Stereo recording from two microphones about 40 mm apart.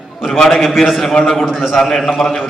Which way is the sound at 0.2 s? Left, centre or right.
Centre.